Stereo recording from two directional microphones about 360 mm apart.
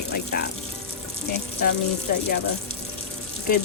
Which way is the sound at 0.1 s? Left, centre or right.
Left.